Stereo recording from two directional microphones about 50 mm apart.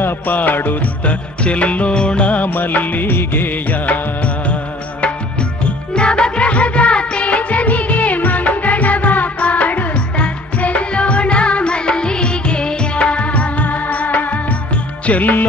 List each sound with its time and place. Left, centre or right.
0.0 s music: left
1.0 s music: left
2.4 s music: left
5.9 s music: centre